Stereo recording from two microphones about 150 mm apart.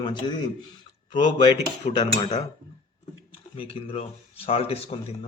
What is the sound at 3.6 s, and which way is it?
A man's voice, 40° left (ahead or behind).